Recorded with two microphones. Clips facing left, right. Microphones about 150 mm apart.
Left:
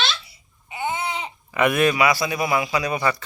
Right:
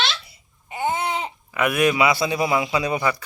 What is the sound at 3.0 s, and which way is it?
Speech, 10° right (ahead or behind).